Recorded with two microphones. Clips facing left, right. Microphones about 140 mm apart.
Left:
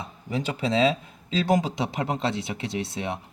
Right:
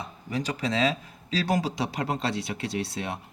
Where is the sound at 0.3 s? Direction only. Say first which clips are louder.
Left 2 dB; 25° left (ahead or behind).